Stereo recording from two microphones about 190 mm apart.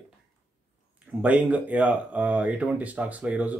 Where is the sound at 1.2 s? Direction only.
10° right (ahead or behind).